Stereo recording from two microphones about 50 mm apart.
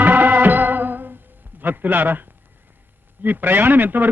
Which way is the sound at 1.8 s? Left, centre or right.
Right.